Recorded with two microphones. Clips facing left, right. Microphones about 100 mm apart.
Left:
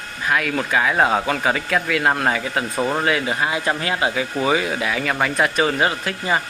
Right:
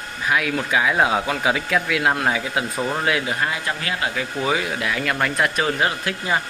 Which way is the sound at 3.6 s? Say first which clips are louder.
Left 4 dB; 30° left (ahead or behind).